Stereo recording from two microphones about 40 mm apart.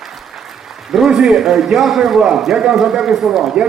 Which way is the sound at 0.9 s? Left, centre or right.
Centre.